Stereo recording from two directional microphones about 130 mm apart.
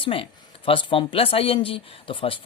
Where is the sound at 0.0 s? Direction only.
45° left (ahead or behind).